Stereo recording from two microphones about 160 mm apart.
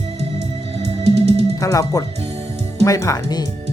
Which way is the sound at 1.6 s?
20° left (ahead or behind).